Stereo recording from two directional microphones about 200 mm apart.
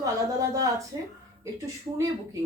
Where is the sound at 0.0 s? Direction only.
15° right (ahead or behind).